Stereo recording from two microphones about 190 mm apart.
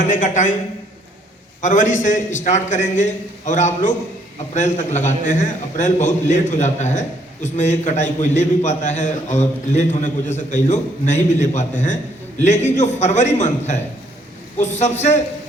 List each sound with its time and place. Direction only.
0.0 s a man's voice: 40° left (ahead or behind)
1.6 s a man's voice: 40° left (ahead or behind)